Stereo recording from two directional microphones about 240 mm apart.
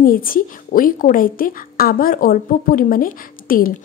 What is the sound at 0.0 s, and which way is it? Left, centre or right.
A woman's voice, left.